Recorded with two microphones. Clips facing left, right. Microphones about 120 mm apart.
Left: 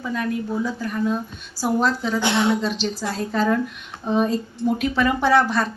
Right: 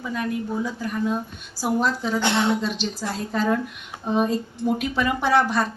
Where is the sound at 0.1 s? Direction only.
15° right (ahead or behind).